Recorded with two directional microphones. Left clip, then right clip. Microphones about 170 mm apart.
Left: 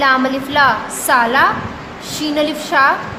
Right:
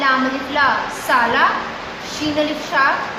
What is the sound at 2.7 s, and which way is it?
Speech, 60° left (ahead or behind).